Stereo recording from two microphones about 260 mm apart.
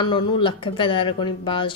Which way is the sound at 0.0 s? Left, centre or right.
Centre.